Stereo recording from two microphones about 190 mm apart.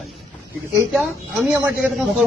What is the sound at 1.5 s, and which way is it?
Speech, 10° right (ahead or behind).